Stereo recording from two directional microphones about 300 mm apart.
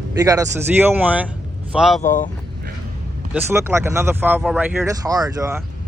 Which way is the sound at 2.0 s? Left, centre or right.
Left.